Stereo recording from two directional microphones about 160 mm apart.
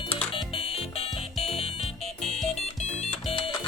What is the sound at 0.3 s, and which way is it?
Music, 35° left (ahead or behind).